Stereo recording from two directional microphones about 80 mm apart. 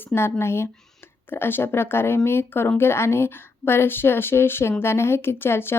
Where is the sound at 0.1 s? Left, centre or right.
Left.